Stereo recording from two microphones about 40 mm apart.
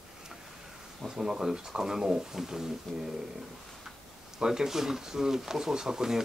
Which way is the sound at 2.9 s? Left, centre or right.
Centre.